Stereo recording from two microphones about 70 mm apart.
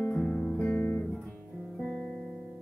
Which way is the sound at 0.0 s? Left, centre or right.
Centre.